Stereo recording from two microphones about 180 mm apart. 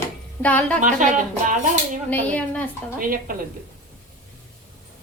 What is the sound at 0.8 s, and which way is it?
Speech, 45° right (ahead or behind).